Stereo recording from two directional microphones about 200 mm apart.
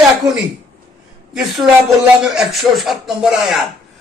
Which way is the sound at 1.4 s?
Centre (ahead or behind).